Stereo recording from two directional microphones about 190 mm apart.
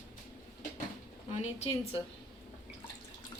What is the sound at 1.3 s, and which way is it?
Speech, 35° left (ahead or behind).